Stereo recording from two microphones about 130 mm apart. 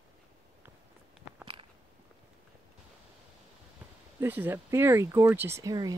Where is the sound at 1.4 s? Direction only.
40° right (ahead or behind).